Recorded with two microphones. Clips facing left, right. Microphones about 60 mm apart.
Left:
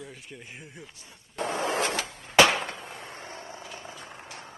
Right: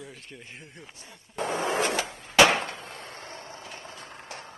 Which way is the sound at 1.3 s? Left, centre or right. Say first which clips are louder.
Right 1 dB; centre.